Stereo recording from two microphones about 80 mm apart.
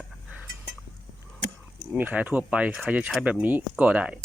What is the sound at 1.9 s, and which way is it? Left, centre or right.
Speech, centre.